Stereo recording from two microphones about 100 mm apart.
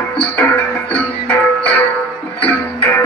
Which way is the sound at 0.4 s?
15° left (ahead or behind).